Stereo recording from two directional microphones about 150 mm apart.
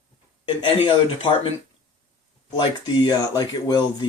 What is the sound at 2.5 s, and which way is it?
Speech, 25° left (ahead or behind).